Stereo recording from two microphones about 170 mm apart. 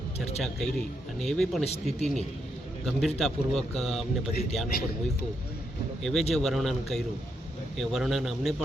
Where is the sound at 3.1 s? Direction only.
Centre (ahead or behind).